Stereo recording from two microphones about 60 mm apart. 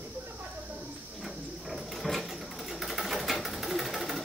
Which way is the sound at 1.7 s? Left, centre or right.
Centre.